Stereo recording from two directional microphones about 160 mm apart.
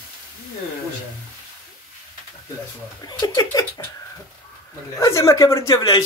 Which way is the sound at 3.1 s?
25° left (ahead or behind).